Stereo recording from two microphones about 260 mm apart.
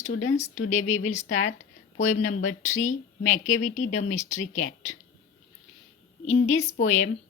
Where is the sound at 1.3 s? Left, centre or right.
Left.